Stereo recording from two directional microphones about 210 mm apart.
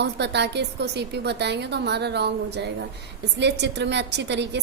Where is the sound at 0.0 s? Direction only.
55° right (ahead or behind).